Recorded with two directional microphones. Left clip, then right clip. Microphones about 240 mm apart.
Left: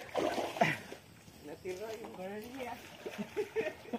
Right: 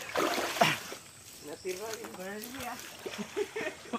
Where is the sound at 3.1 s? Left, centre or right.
Centre.